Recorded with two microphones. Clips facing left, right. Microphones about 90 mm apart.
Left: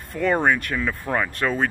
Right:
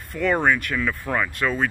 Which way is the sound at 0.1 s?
30° left (ahead or behind).